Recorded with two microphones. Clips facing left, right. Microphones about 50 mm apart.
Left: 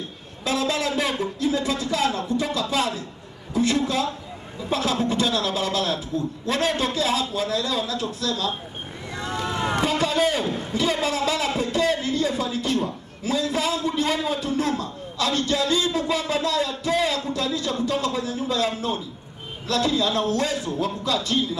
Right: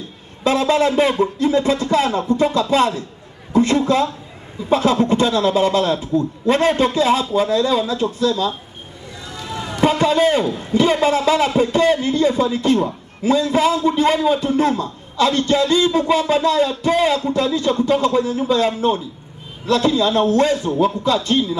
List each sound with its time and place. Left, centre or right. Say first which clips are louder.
0.4 s a man's voice: right 8 dB; right
9.2 s a sound: left 3 dB; left
9.8 s a man's voice: right 8 dB; right